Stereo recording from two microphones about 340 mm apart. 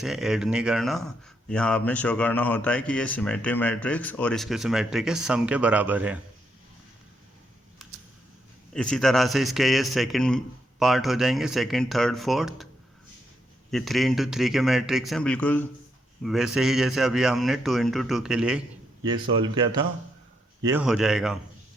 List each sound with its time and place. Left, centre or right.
0.0 s speech: centre
7.8 s computer keyboard: centre
8.7 s speech: centre
13.7 s speech: centre
19.2 s speech: centre
20.7 s speech: centre